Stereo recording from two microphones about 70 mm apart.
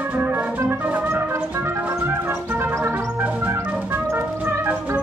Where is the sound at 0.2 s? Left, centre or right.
Right.